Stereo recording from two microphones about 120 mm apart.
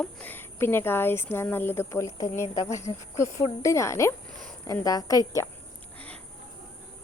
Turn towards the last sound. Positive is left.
turn(degrees=10)  # may be behind; listen again after turning